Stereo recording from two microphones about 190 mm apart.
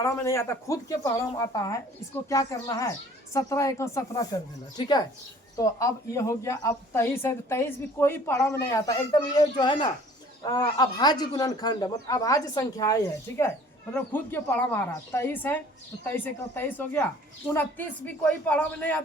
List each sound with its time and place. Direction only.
0.0 s speech: 15° left (ahead or behind)
5.5 s speech: 15° left (ahead or behind)